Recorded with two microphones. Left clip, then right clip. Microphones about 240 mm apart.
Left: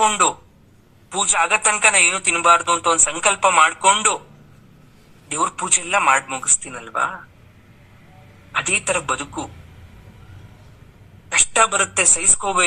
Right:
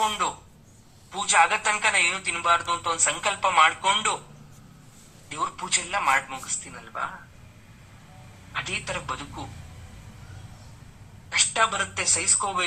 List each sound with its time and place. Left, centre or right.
0.0 s a man's voice: left
5.3 s a man's voice: left
8.5 s a man's voice: left
11.3 s a man's voice: left